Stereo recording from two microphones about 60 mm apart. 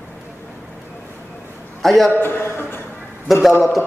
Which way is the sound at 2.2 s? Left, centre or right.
Left.